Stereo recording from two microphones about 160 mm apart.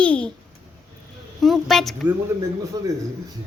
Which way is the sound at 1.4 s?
Centre (ahead or behind).